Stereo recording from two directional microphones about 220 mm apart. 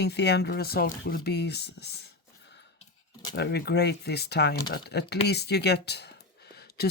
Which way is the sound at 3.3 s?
50° left (ahead or behind).